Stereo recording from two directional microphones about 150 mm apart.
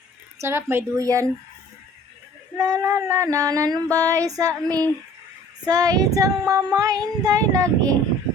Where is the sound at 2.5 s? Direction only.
20° right (ahead or behind).